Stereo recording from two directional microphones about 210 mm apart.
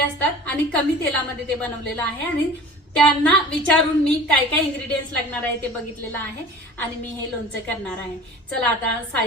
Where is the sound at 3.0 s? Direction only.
5° left (ahead or behind).